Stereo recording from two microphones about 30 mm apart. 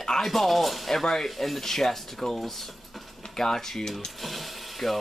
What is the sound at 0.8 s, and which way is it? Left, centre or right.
Speech, centre.